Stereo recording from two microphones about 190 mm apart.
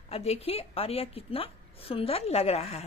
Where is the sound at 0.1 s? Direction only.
35° left (ahead or behind).